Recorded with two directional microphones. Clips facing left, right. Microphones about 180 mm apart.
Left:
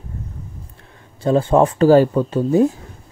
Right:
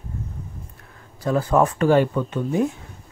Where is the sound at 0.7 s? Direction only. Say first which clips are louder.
Left 1 dB; 25° left (ahead or behind).